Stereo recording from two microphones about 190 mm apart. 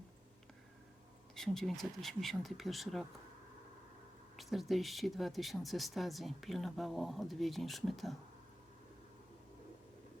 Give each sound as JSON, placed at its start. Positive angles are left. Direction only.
{"t": 1.4, "sound": "speech", "side_deg": 0}
{"t": 4.4, "sound": "speech", "side_deg": 0}